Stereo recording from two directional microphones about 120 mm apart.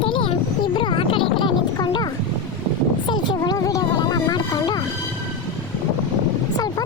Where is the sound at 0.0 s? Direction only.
45° left (ahead or behind).